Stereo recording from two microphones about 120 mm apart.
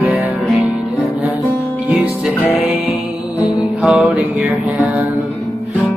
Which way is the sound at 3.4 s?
30° left (ahead or behind).